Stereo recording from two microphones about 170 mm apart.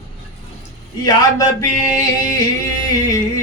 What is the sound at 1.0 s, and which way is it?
Speech, 20° left (ahead or behind).